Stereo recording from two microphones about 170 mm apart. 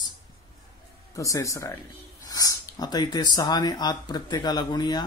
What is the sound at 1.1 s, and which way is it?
Speech, 20° left (ahead or behind).